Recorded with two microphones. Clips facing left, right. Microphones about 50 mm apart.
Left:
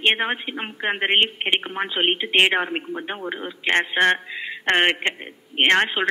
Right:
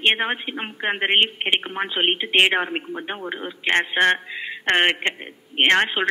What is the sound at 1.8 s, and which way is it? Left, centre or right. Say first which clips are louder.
A woman's voice: even; centre.